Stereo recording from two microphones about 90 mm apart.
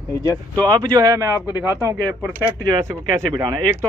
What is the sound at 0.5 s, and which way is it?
Speech, 50° right (ahead or behind).